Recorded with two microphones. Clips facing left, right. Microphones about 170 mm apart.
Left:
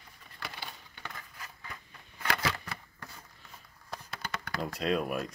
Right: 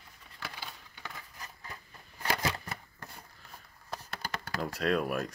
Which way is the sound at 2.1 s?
35° right (ahead or behind).